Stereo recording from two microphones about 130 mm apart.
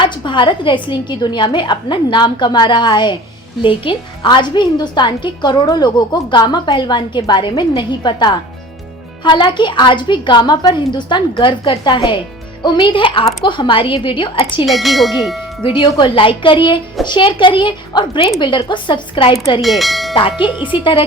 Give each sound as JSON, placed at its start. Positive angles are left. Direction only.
{"t": 0.0, "sound": "a woman's voice", "side_deg": 35}
{"t": 14.7, "sound": "bell", "side_deg": 0}
{"t": 15.6, "sound": "a woman's voice", "side_deg": 40}
{"t": 19.6, "sound": "bell", "side_deg": 0}
{"t": 20.4, "sound": "a woman's voice", "side_deg": 40}